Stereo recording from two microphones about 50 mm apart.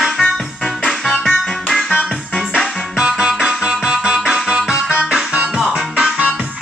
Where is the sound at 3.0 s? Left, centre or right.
Centre.